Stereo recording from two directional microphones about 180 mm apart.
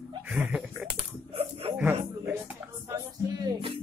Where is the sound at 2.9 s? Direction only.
20° right (ahead or behind).